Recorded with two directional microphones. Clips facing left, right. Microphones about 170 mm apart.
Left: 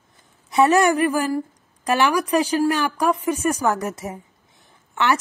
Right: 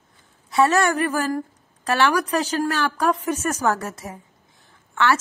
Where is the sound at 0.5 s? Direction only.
15° left (ahead or behind).